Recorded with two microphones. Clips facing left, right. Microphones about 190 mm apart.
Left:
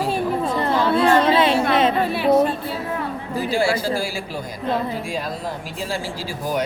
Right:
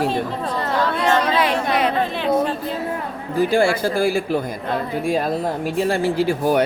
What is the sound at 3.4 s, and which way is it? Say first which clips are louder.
Speech: right 1 dB; 55° right (ahead or behind).